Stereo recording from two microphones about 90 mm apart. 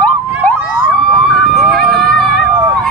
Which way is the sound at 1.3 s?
Centre (ahead or behind).